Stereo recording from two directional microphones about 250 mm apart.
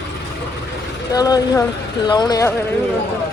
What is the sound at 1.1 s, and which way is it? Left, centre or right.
Speech, centre.